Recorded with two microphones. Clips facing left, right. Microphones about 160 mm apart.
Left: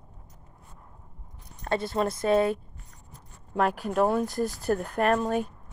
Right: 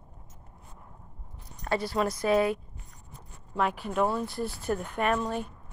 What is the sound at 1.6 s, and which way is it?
Speech, 25° left (ahead or behind).